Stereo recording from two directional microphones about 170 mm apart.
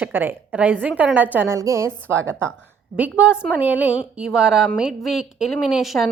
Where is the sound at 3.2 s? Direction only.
5° right (ahead or behind).